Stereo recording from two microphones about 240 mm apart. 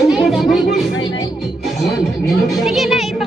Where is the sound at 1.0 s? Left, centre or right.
Centre.